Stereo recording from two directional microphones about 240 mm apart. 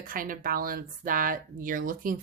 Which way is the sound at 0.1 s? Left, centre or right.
Right.